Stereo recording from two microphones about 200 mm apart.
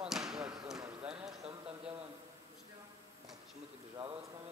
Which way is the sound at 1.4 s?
30° right (ahead or behind).